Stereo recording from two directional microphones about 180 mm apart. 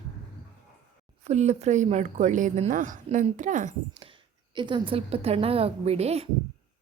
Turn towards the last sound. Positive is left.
turn(degrees=-35)  # may be behind; listen again after turning